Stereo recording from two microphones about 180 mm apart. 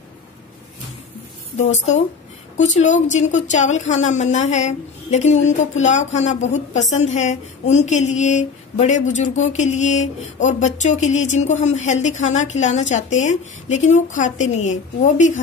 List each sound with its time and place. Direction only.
1.6 s speech: 40° left (ahead or behind)